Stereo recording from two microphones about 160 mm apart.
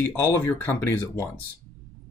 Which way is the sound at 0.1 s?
15° left (ahead or behind).